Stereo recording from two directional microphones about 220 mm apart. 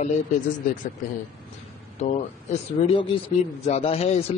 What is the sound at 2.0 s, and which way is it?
A man's voice, 25° left (ahead or behind).